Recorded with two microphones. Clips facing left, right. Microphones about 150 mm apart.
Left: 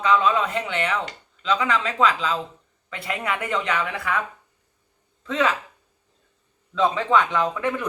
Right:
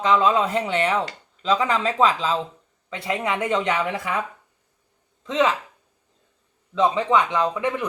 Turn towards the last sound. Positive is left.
turn(degrees=-20)  # may be behind; listen again after turning